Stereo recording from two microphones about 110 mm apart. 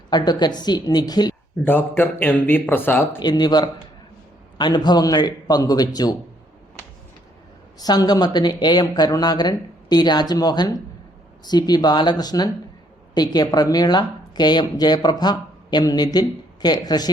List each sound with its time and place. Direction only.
0.1 s speech: 40° left (ahead or behind)
1.6 s speech: 15° left (ahead or behind)
3.2 s speech: 40° left (ahead or behind)
7.8 s speech: 35° left (ahead or behind)